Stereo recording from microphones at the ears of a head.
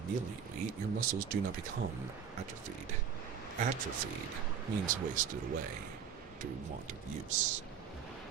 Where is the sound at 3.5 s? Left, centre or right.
Right.